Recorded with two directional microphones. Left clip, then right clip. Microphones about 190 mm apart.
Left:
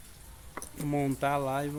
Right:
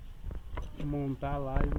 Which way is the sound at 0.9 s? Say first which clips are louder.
Left 7 dB; 25° left (ahead or behind).